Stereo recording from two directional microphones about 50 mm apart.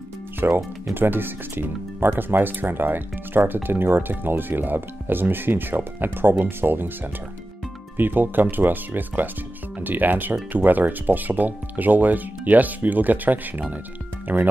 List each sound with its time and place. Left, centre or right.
0.4 s speech: right
8.0 s speech: right